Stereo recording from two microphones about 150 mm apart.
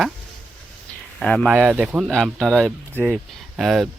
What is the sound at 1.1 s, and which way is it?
Speech, 5° left (ahead or behind).